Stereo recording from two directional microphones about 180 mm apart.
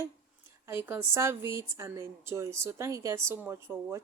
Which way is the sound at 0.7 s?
10° right (ahead or behind).